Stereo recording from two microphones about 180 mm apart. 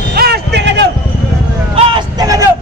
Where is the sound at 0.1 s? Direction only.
60° right (ahead or behind).